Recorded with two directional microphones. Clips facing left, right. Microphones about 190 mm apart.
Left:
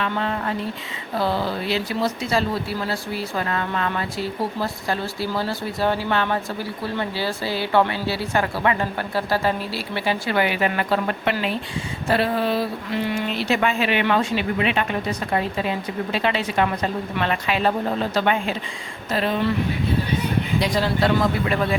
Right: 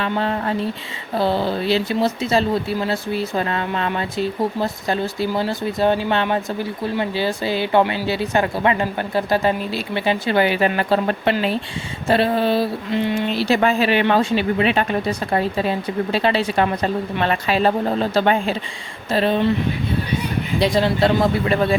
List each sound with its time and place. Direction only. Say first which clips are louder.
0.0 s speech: right 3 dB; 35° right (ahead or behind)
20.6 s speech: right 6 dB; 25° right (ahead or behind)